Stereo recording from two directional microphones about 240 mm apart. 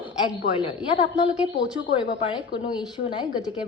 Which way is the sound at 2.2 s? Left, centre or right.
Left.